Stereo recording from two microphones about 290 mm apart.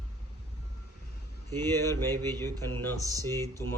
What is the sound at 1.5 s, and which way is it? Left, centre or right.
Speech, centre.